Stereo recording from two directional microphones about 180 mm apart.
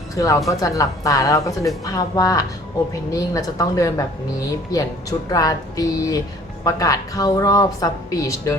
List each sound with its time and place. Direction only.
0.4 s speech: 20° left (ahead or behind)